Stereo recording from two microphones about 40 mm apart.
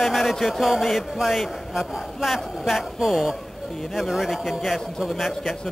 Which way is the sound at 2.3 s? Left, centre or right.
Centre.